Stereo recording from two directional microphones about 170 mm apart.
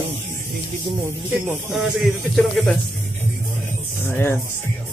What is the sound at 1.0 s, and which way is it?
Speech, 10° right (ahead or behind).